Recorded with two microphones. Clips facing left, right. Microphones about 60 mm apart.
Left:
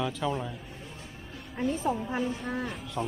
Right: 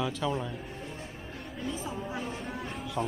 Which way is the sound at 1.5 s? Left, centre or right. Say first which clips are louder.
Left 8 dB; left.